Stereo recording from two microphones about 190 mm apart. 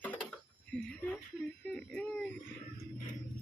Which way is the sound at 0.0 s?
5° left (ahead or behind).